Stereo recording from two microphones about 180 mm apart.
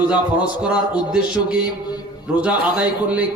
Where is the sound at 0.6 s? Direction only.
5° right (ahead or behind).